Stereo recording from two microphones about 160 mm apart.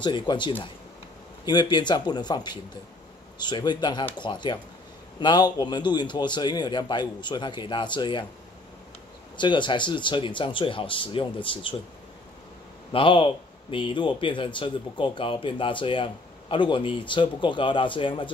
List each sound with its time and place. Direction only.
0.0 s a man's voice: 30° left (ahead or behind)
9.4 s a man's voice: 30° left (ahead or behind)
12.9 s a man's voice: 30° left (ahead or behind)